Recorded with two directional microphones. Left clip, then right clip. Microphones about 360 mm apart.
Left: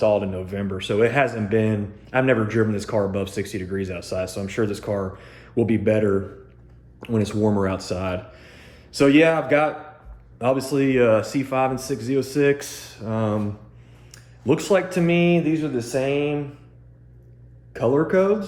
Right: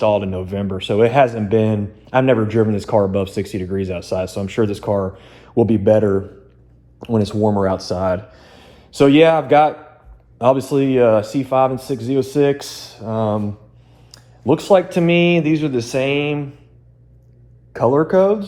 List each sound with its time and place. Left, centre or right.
0.2 s speech: centre
7.4 s speech: centre
17.9 s speech: centre